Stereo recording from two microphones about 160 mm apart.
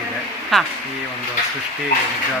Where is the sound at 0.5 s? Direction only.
Centre (ahead or behind).